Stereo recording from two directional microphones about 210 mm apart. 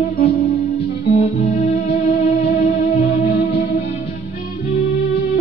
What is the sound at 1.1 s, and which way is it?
Music, 30° left (ahead or behind).